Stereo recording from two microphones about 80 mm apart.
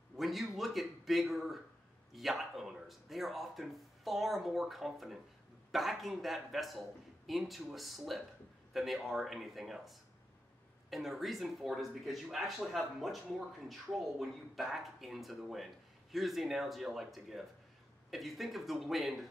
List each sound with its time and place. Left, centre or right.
0.2 s speech: centre